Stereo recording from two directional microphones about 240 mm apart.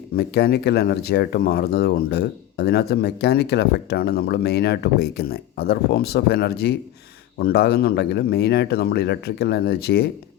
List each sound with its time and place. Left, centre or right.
0.2 s speech: left